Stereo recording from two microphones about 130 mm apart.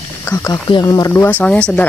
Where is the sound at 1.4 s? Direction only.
5° left (ahead or behind).